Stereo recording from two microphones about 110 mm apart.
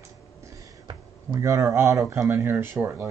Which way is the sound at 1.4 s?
25° right (ahead or behind).